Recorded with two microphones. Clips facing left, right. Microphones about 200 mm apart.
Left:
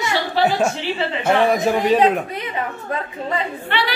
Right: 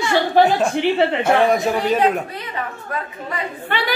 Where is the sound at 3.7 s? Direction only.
45° right (ahead or behind).